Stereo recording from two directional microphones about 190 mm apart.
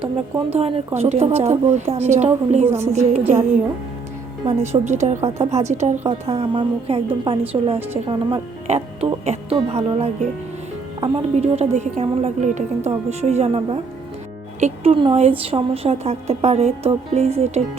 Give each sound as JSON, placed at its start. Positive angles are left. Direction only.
{"t": 0.0, "sound": "a woman's voice", "side_deg": -30}
{"t": 2.6, "sound": "speech", "side_deg": -15}
{"t": 2.9, "sound": "a woman's voice", "side_deg": -35}
{"t": 4.4, "sound": "a woman's voice", "side_deg": -35}